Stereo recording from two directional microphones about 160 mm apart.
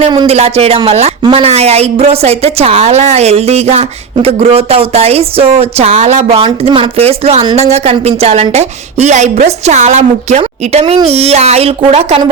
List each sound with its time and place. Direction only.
0.1 s a woman's voice: 40° right (ahead or behind)